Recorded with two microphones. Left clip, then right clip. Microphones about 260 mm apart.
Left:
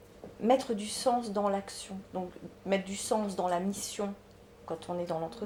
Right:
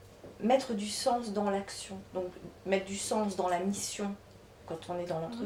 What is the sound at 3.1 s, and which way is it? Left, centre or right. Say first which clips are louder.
Speech: left 1 dB; left.